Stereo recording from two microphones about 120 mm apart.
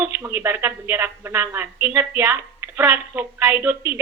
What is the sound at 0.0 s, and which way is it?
A woman's voice, 20° right (ahead or behind).